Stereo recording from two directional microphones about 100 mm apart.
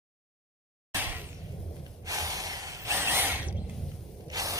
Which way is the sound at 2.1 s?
35° right (ahead or behind).